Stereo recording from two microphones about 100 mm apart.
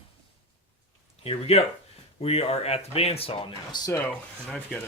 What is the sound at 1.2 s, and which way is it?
Speech, 90° left.